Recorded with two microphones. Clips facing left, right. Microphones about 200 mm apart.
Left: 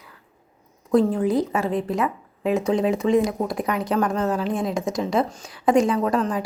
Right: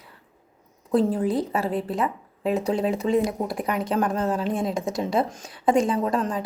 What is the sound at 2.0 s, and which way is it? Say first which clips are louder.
Speech: left 2 dB; 30° right (ahead or behind).